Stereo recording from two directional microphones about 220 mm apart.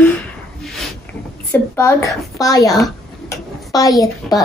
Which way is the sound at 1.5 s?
10° left (ahead or behind).